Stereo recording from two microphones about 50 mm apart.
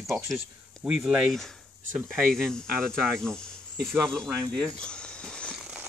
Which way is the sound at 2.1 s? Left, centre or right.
Centre.